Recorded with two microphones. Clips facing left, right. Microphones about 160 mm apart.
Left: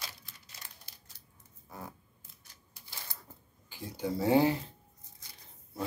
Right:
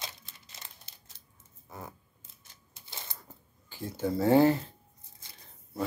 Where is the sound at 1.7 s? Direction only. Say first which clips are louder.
Right 1 dB; 20° right (ahead or behind).